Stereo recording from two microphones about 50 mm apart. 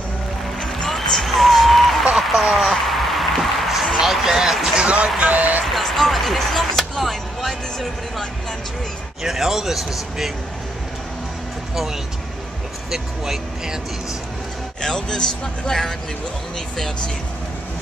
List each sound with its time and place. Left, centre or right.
0.6 s a sound: centre
4.8 s speech: right
5.7 s a man's voice: centre
11.7 s a man's voice: centre
14.8 s speech: centre